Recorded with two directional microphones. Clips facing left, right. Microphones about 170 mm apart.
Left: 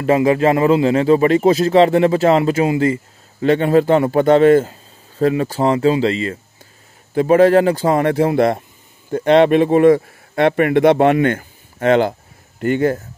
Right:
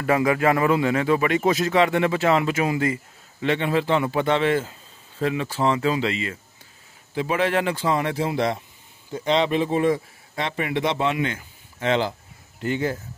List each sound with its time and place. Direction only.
0.0 s a man's voice: 25° left (ahead or behind)
3.3 s a man's voice: 40° left (ahead or behind)